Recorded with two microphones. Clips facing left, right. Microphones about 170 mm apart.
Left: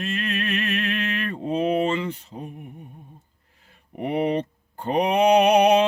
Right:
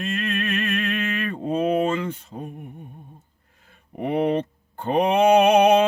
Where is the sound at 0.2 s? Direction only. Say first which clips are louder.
Right 1 dB; 50° right (ahead or behind).